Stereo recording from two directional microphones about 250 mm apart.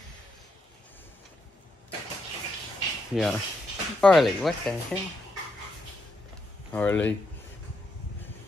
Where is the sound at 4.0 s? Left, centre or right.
Centre.